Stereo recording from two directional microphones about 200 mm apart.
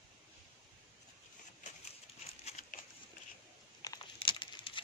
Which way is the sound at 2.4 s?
35° left (ahead or behind).